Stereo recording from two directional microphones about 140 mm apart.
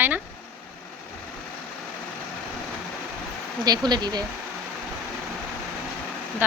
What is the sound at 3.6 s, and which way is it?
Speech, 30° right (ahead or behind).